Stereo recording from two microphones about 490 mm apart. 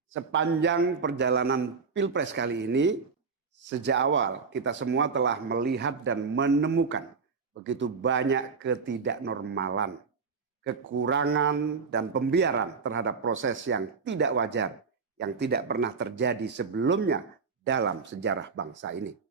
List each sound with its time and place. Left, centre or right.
0.1 s a man's voice: right